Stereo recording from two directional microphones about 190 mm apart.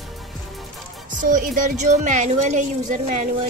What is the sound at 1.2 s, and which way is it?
A woman's voice, 45° right (ahead or behind).